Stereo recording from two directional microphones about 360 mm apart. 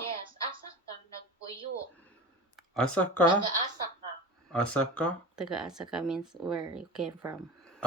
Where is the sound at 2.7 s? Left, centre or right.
Centre.